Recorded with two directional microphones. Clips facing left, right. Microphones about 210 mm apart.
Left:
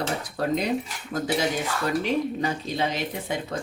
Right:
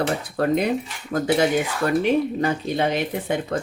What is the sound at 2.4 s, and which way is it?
Speech, 55° right (ahead or behind).